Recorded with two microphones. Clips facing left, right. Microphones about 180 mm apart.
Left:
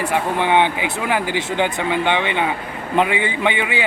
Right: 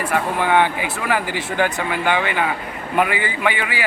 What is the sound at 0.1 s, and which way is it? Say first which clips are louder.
A man's voice: even; 20° left (ahead or behind).